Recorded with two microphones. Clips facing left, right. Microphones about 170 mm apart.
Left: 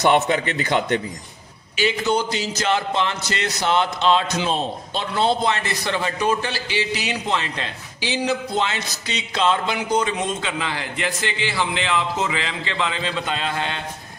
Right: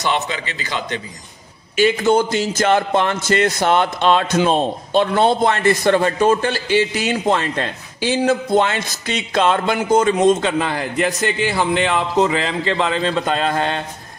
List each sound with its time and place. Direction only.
0.0 s a man's voice: 55° left (ahead or behind)
1.8 s a man's voice: 50° right (ahead or behind)